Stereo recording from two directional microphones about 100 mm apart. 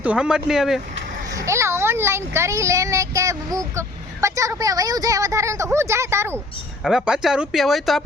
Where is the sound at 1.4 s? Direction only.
30° right (ahead or behind).